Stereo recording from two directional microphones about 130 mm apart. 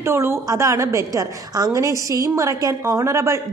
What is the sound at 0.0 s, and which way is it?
A woman's voice, 20° right (ahead or behind).